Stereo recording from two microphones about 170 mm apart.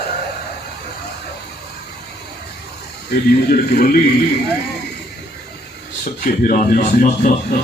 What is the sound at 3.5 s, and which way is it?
Speech, 60° left (ahead or behind).